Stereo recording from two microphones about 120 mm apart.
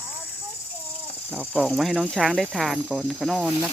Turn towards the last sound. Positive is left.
turn(degrees=-5)  # may be behind; listen again after turning